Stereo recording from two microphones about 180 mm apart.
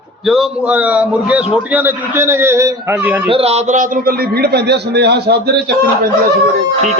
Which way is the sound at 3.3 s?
30° right (ahead or behind).